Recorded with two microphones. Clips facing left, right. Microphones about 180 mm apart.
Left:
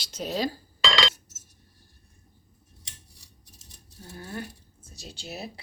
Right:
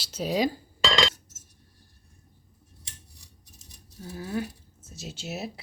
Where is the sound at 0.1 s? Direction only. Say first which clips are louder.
Right 3 dB; 10° right (ahead or behind).